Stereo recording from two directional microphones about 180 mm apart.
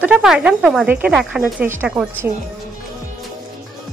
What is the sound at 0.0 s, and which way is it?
Speech, 5° right (ahead or behind).